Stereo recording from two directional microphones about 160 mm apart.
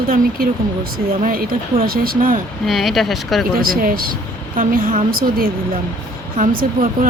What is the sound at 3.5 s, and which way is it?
Speech, 65° right (ahead or behind).